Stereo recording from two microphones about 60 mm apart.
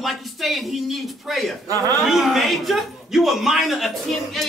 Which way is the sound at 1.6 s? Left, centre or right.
Right.